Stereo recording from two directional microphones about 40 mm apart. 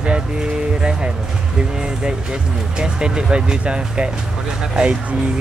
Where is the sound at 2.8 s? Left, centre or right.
Right.